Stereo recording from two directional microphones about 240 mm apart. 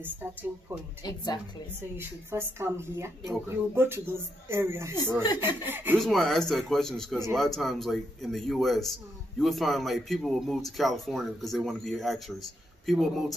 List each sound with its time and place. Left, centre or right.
0.0 s speech: centre
1.0 s a woman's voice: centre
2.0 s a man's voice: centre